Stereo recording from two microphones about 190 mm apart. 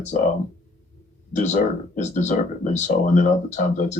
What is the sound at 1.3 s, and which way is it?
Speech, 40° left (ahead or behind).